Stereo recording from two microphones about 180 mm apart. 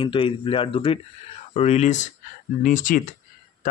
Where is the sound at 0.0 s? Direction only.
30° left (ahead or behind).